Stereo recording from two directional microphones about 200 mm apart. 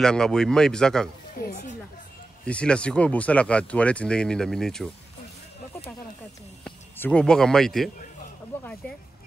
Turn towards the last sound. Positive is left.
turn(degrees=0)  # may be behind; listen again after turning